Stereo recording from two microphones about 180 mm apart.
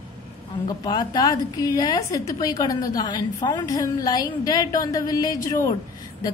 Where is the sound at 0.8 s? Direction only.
20° left (ahead or behind).